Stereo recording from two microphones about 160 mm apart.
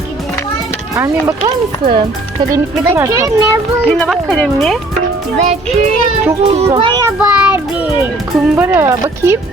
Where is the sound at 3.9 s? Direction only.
Centre (ahead or behind).